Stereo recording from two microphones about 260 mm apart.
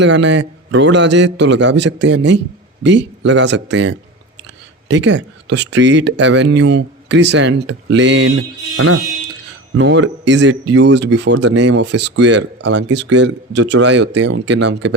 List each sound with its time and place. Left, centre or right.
0.0 s a man's voice: right